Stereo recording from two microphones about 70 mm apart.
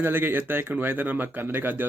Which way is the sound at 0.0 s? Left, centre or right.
Right.